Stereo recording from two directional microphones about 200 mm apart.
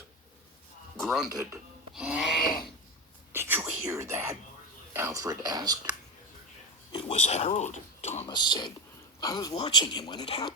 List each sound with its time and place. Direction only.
0.9 s a sound: centre (ahead or behind)
1.3 s speech: 20° right (ahead or behind)
1.9 s owl: 5° right (ahead or behind)
2.4 s a sound: 45° left (ahead or behind)
3.3 s whispering: 10° right (ahead or behind)
4.9 s speech: 15° right (ahead or behind)
6.9 s speech: 30° left (ahead or behind)
8.3 s speech: 20° left (ahead or behind)